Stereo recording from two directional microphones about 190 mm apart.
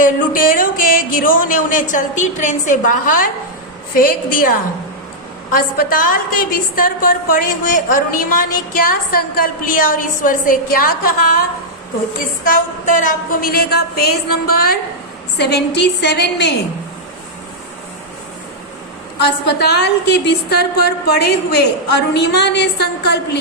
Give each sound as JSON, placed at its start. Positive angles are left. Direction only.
{"t": 0.0, "sound": "a woman's voice", "side_deg": 45}
{"t": 5.5, "sound": "a woman's voice", "side_deg": 50}
{"t": 12.5, "sound": "a woman's voice", "side_deg": 45}
{"t": 19.2, "sound": "a woman's voice", "side_deg": 60}